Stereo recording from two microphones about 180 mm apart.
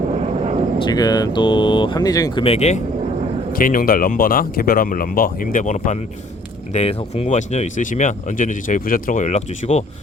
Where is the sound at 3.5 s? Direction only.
50° left (ahead or behind).